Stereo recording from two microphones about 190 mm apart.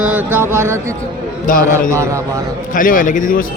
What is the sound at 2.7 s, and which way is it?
Speech, 45° left (ahead or behind).